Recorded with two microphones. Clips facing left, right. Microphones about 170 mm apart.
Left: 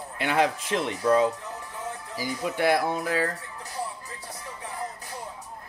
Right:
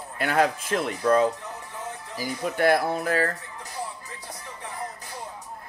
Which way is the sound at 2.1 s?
50° right (ahead or behind).